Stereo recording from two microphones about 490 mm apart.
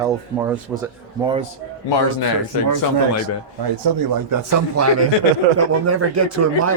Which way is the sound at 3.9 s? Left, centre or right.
Right.